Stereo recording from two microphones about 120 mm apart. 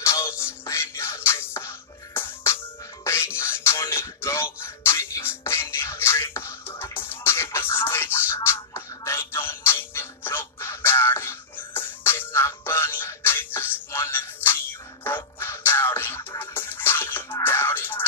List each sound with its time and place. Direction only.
0.0 s music: 25° left (ahead or behind)